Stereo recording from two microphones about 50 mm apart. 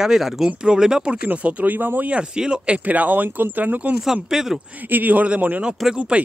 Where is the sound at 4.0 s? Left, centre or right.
Centre.